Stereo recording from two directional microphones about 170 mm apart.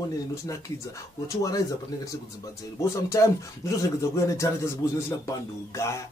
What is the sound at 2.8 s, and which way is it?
Speech, 20° left (ahead or behind).